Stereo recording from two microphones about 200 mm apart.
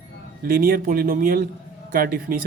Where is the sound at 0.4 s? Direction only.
45° right (ahead or behind).